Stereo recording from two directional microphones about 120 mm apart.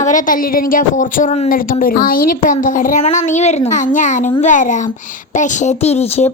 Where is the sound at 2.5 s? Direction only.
90° left.